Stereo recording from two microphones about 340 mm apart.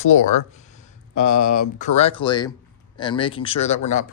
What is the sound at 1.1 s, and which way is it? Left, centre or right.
Speech, left.